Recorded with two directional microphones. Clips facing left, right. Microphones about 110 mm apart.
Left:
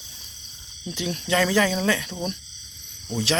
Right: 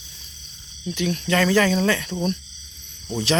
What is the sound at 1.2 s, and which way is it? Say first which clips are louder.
Speech: right 2 dB; 10° left (ahead or behind).